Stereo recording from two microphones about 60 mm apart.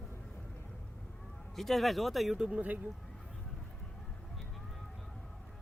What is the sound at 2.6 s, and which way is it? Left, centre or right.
Speech, right.